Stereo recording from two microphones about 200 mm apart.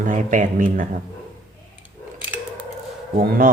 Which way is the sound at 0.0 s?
40° right (ahead or behind).